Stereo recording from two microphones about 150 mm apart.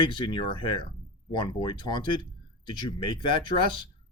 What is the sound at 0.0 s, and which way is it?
Speech, 35° left (ahead or behind).